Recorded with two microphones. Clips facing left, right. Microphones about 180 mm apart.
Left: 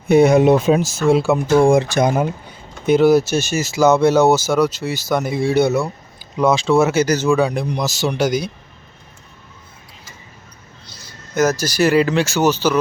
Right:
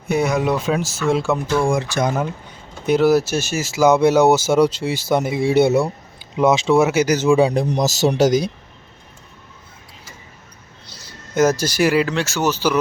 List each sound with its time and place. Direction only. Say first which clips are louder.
0.1 s speech: left 7 dB; 25° left (ahead or behind)
1.1 s speech: left 4 dB; 5° left (ahead or behind)
1.5 s speech: left 7 dB; 25° left (ahead or behind)
2.0 s speech: left 4 dB; 15° left (ahead or behind)
2.8 s speech: left 2 dB; centre (ahead or behind)
7.5 s speech: right 3 dB; 40° right (ahead or behind)
10.8 s a sound: right 1 dB; 30° right (ahead or behind)
11.8 s speech: left 4 dB; 10° right (ahead or behind)